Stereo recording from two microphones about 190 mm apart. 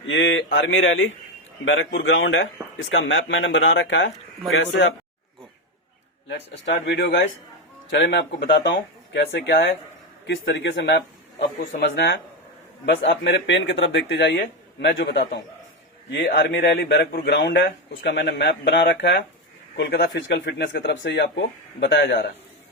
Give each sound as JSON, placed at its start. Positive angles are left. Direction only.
{"t": 0.1, "sound": "a man's voice", "side_deg": 85}
{"t": 1.6, "sound": "a man's voice", "side_deg": 75}
{"t": 6.2, "sound": "a man's voice", "side_deg": 70}